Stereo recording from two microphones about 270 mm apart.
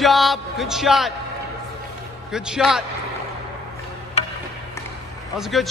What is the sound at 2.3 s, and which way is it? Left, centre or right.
Speech, centre.